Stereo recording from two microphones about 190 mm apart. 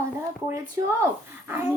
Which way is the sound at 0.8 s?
15° right (ahead or behind).